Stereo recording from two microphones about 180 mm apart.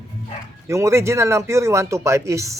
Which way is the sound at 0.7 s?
15° right (ahead or behind).